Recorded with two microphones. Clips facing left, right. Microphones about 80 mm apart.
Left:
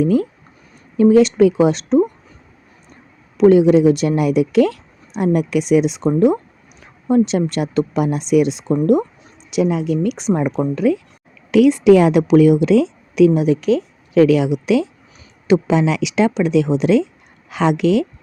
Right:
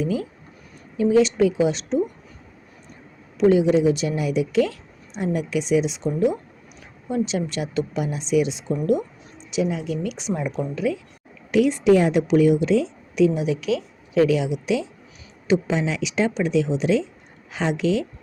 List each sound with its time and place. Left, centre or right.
0.0 s speech: left
3.3 s speech: left
9.5 s speech: left
11.5 s a woman's voice: left
13.4 s speech: left
14.1 s speech: left
17.5 s speech: left